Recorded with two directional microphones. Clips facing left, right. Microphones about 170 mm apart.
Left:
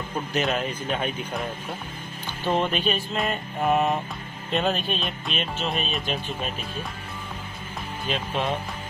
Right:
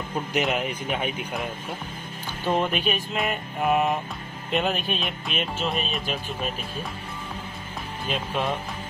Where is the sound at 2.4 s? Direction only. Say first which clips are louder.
Even; 5° right (ahead or behind).